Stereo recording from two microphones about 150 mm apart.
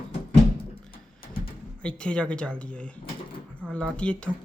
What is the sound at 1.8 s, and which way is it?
Speech, 5° left (ahead or behind).